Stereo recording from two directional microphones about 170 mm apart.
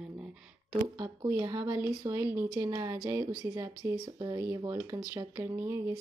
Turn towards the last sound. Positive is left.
turn(degrees=-15)  # may be behind; listen again after turning